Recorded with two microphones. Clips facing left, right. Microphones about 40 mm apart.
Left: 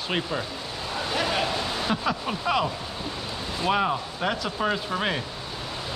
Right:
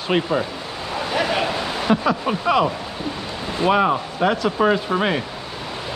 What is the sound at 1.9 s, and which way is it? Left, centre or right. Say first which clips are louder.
Speech: right 11 dB; centre.